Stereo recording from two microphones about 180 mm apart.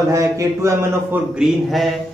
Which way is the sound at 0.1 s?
15° right (ahead or behind).